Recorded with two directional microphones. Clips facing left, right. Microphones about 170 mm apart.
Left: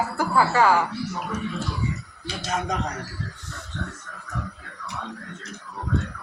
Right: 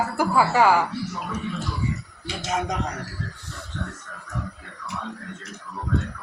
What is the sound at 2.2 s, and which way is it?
Speech, 20° right (ahead or behind).